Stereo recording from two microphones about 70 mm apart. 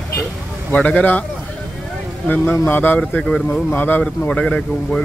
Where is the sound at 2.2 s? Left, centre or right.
Left.